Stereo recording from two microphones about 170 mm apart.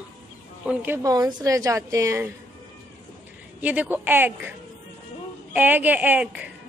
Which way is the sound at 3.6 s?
10° right (ahead or behind).